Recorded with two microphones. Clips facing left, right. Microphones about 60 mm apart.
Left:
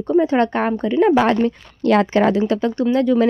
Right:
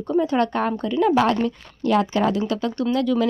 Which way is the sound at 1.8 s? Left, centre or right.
Left.